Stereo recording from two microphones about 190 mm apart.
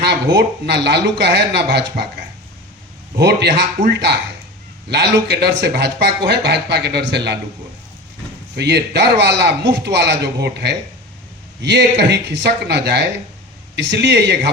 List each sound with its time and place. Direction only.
0.0 s speech: 65° right (ahead or behind)
3.2 s speech: 60° right (ahead or behind)
5.3 s speech: 65° right (ahead or behind)
8.5 s speech: 60° right (ahead or behind)